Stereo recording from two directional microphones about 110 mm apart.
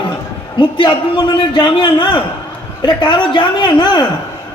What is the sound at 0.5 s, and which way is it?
A woman's voice, 45° left (ahead or behind).